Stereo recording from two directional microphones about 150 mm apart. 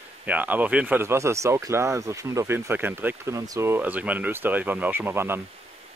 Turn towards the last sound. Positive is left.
turn(degrees=-15)  # may be behind; listen again after turning